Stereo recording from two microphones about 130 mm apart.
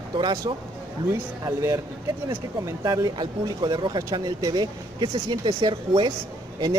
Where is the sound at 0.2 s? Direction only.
30° right (ahead or behind).